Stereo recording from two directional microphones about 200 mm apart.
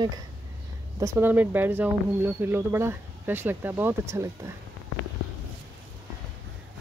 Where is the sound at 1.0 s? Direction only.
15° right (ahead or behind).